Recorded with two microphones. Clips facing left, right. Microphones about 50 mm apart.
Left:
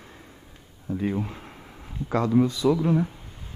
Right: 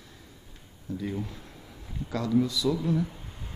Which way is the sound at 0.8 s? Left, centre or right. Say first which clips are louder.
Left 6 dB; left.